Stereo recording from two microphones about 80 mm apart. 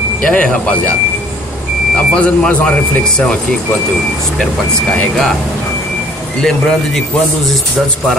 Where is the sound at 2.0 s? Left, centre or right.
Centre.